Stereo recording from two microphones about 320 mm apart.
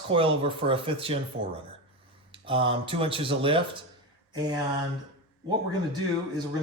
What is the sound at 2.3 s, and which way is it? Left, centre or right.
Speech, centre.